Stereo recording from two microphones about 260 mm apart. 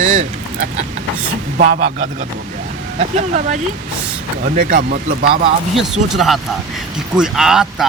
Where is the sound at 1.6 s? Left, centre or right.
Right.